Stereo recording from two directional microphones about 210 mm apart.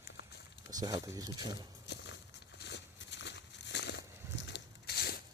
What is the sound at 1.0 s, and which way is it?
Speech, 15° right (ahead or behind).